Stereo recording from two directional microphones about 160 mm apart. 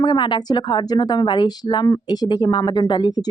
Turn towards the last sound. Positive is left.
turn(degrees=25)  # may be behind; listen again after turning